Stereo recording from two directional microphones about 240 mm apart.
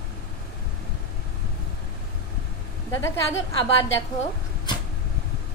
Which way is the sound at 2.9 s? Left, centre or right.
Centre.